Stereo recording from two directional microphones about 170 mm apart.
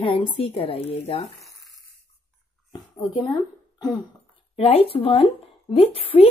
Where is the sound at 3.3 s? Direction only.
25° left (ahead or behind).